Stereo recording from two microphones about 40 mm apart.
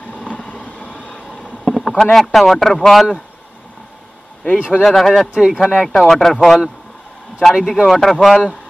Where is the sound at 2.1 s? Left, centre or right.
Centre.